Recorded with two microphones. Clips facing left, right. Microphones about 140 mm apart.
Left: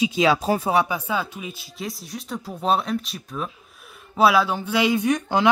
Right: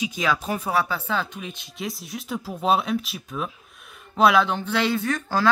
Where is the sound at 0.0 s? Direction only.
25° left (ahead or behind).